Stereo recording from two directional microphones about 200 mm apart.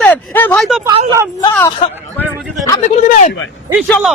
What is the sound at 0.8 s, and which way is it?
Speech, 15° right (ahead or behind).